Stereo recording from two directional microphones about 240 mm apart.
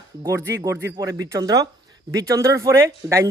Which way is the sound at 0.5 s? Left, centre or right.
Centre.